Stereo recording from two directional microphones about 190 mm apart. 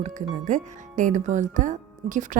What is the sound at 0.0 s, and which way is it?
Speech, 40° right (ahead or behind).